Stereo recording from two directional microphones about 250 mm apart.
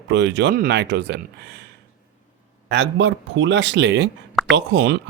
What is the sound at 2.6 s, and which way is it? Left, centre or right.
Speech, right.